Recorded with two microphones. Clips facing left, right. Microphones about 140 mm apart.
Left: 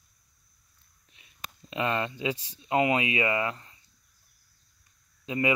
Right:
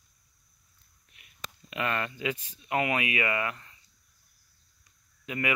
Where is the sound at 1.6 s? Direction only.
25° left (ahead or behind).